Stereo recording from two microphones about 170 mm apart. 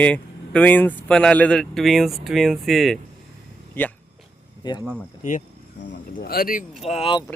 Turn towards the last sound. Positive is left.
turn(degrees=35)  # may be behind; listen again after turning